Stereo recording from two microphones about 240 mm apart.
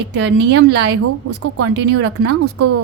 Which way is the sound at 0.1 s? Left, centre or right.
Right.